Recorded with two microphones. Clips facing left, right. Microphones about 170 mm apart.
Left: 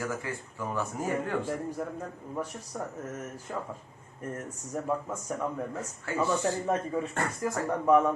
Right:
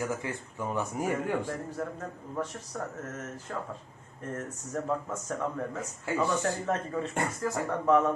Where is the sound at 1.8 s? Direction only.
15° left (ahead or behind).